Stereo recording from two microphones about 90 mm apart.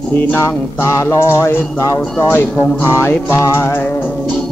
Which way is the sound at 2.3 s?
25° left (ahead or behind).